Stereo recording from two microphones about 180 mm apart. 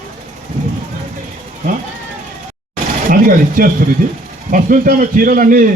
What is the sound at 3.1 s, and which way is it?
A man's voice, 50° right (ahead or behind).